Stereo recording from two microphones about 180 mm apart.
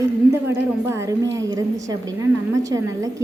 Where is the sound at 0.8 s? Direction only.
15° right (ahead or behind).